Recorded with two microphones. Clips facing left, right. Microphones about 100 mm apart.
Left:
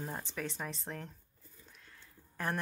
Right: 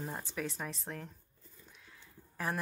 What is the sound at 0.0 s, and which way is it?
Speech, 5° right (ahead or behind).